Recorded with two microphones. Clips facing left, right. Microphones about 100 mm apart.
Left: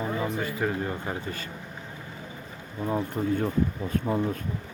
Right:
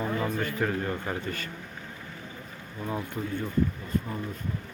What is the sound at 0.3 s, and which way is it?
Speech, 15° left (ahead or behind).